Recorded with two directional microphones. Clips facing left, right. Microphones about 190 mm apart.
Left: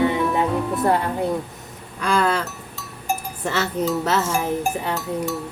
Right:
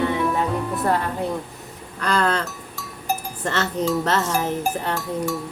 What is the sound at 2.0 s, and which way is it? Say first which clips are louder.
Speech: left 1 dB; 10° left (ahead or behind).